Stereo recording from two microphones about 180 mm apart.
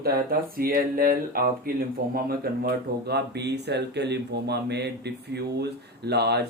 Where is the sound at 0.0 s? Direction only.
55° right (ahead or behind).